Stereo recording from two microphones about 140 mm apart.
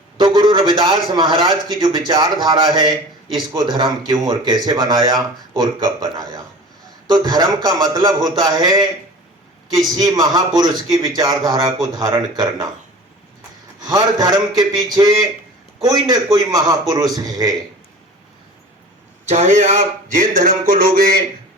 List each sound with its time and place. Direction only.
0.2 s a sound: 35° right (ahead or behind)
1.1 s a man's voice: 30° right (ahead or behind)
9.9 s speech: 25° right (ahead or behind)
13.8 s speech: 30° right (ahead or behind)
19.3 s speech: 55° right (ahead or behind); by 21.2 s 90° right